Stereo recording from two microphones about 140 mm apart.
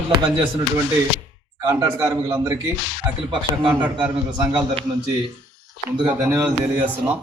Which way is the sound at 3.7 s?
10° right (ahead or behind).